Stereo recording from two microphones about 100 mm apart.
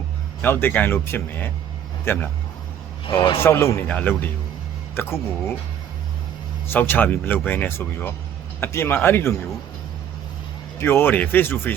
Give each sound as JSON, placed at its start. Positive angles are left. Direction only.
{"t": 0.4, "sound": "speech", "side_deg": 20}
{"t": 3.2, "sound": "a man's voice", "side_deg": 55}
{"t": 3.4, "sound": "speech", "side_deg": 25}
{"t": 3.8, "sound": "speech", "side_deg": 15}
{"t": 6.7, "sound": "speech", "side_deg": 20}
{"t": 10.8, "sound": "speech", "side_deg": 25}